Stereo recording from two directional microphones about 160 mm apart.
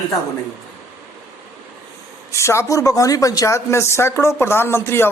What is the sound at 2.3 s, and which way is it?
Speech, 15° left (ahead or behind).